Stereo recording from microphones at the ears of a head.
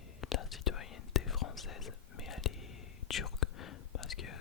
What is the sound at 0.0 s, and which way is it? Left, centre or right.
Whispering, left.